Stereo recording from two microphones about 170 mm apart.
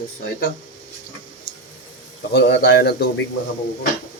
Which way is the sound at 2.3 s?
85° left.